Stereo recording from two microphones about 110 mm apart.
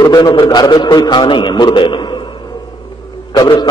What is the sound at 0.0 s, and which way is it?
A man's voice, 35° left (ahead or behind).